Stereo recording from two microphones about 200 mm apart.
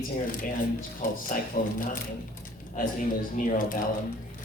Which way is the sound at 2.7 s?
40° left (ahead or behind).